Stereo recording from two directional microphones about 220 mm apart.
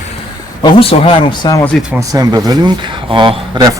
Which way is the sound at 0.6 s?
25° left (ahead or behind).